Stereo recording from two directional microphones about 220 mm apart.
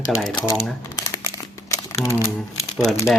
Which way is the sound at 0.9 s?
15° left (ahead or behind).